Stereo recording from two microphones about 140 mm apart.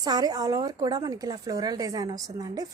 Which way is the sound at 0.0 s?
30° right (ahead or behind).